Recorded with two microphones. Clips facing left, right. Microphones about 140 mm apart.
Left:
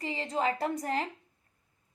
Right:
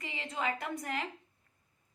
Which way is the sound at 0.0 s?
35° left (ahead or behind).